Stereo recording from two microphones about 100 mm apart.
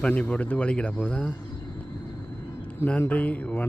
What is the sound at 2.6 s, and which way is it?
Speech, 15° left (ahead or behind).